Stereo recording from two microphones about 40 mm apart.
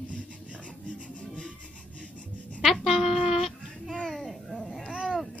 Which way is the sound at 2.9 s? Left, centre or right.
Centre.